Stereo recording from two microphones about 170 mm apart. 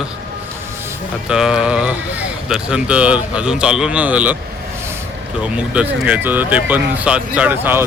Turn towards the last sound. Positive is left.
turn(degrees=-10)  # may be behind; listen again after turning